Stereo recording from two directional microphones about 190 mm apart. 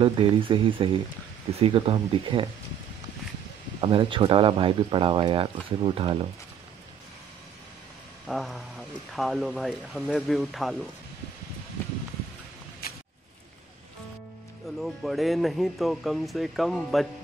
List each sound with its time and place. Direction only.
0.0 s speech: 25° right (ahead or behind)
3.8 s speech: 25° right (ahead or behind)
8.3 s speech: centre (ahead or behind)
12.8 s a sound: 50° left (ahead or behind)
14.8 s speech: centre (ahead or behind)